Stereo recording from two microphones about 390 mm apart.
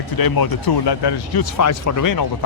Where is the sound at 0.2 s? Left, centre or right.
Left.